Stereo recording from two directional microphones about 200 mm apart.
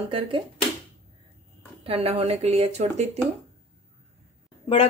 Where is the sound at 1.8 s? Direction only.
30° right (ahead or behind).